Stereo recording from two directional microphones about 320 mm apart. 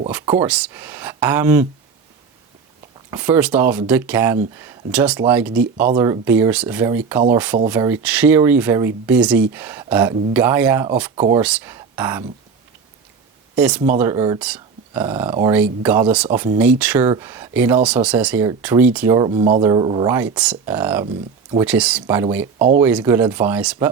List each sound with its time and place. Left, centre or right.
0.1 s speech: centre
3.1 s speech: centre
13.6 s speech: centre
22.5 s speech: right
22.8 s speech: centre